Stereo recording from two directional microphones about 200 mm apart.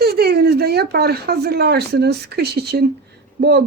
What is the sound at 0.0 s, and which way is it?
Speech, 50° right (ahead or behind).